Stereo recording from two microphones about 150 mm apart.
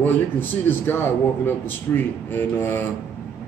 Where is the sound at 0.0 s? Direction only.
15° left (ahead or behind).